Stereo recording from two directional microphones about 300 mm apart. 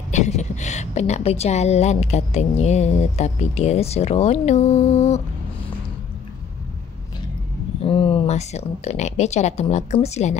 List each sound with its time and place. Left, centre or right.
0.1 s a woman's voice: left
7.8 s speech: centre